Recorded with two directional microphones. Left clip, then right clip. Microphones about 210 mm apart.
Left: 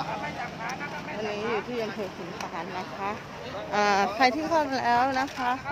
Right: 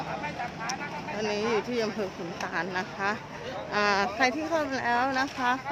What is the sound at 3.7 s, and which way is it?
A woman's voice, 5° left (ahead or behind).